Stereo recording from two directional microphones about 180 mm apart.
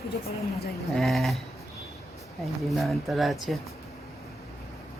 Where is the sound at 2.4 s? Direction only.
Centre (ahead or behind).